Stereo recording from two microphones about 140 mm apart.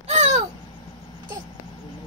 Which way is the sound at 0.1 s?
55° right (ahead or behind).